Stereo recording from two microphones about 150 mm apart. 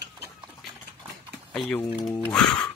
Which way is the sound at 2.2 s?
10° left (ahead or behind).